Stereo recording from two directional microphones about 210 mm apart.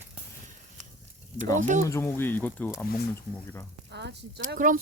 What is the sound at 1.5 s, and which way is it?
Speech, 35° right (ahead or behind).